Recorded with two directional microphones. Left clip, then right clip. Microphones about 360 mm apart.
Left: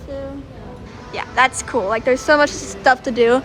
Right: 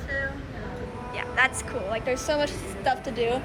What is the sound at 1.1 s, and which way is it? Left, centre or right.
Speech, centre.